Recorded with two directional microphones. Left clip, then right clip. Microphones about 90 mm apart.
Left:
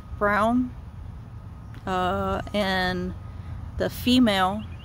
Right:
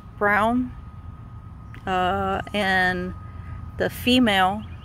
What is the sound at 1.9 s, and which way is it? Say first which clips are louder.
Speech: right 3 dB; 10° left (ahead or behind).